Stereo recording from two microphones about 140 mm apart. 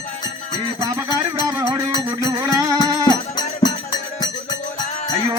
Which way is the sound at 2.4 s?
25° right (ahead or behind).